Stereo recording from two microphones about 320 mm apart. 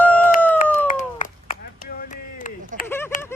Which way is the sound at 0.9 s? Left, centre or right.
Left.